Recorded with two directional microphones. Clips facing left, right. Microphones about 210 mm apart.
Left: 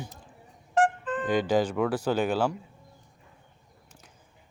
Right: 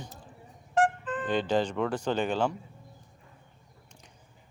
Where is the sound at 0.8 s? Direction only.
45° left (ahead or behind).